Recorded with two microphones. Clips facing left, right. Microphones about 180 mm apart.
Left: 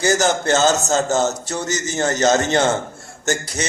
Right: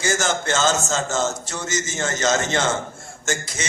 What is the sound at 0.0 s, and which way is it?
A man's voice, 35° left (ahead or behind).